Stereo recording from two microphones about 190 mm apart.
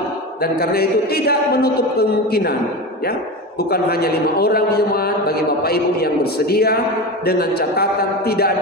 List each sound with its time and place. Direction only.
0.4 s a man's voice: 55° left (ahead or behind)
3.7 s a man's voice: 55° left (ahead or behind)